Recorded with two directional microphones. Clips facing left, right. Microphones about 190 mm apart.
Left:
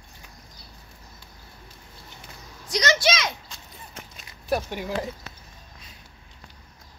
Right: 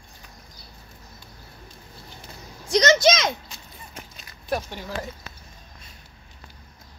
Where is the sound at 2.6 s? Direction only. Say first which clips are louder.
Right 6 dB; 45° right (ahead or behind).